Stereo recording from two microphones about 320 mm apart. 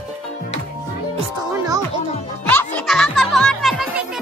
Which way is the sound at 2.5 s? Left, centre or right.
Centre.